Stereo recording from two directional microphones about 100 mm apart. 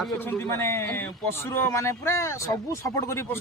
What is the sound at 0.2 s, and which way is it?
A man's voice, 25° left (ahead or behind).